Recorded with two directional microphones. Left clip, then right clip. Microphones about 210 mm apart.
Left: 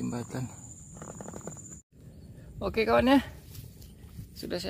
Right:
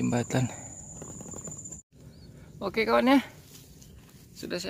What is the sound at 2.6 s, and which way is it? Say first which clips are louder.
Speech: even; centre (ahead or behind).